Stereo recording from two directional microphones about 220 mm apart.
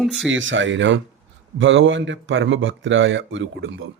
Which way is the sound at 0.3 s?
60° right (ahead or behind).